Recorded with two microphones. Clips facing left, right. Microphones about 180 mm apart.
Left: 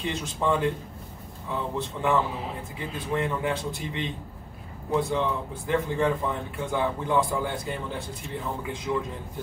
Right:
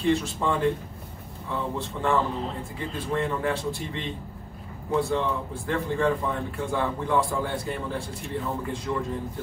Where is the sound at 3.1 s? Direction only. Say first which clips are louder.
Even; 20° left (ahead or behind).